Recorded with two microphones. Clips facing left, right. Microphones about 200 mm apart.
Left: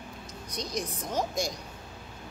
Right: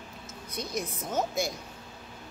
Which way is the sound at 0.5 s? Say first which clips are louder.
Even; 5° right (ahead or behind).